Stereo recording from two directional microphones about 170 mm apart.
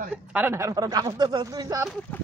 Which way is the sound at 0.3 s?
10° right (ahead or behind).